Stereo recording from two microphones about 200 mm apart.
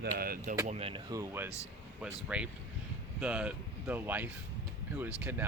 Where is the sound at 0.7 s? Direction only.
30° right (ahead or behind).